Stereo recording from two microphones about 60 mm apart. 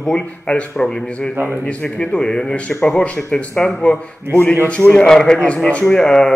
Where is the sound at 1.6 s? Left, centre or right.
Left.